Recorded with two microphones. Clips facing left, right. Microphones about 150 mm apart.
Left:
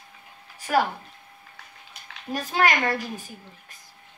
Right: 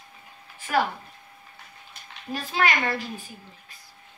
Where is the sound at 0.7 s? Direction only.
45° left (ahead or behind).